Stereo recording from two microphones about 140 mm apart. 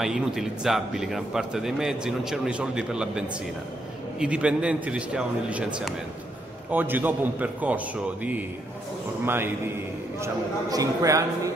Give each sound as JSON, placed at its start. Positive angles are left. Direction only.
{"t": 0.0, "sound": "a man's voice", "side_deg": -5}